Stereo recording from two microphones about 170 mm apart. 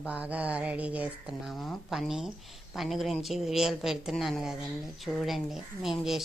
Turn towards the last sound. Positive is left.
turn(degrees=0)  # may be behind; listen again after turning